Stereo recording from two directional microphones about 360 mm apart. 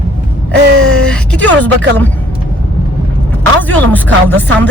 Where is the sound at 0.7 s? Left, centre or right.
Right.